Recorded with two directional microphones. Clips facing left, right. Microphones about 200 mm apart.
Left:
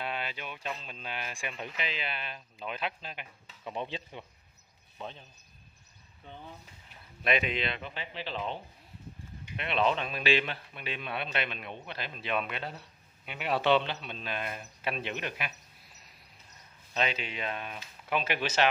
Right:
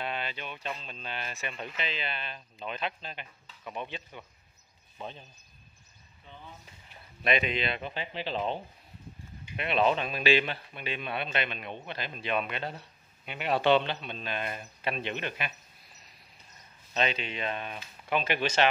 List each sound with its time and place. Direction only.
0.0 s speech: 5° left (ahead or behind)
3.6 s speech: 30° left (ahead or behind)
4.9 s speech: 5° right (ahead or behind)
7.2 s speech: 5° left (ahead or behind)
7.8 s speech: 35° right (ahead or behind)
9.6 s speech: 5° right (ahead or behind)
16.9 s speech: 5° left (ahead or behind)